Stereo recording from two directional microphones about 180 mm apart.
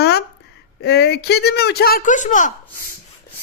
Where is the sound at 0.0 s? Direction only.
65° left (ahead or behind).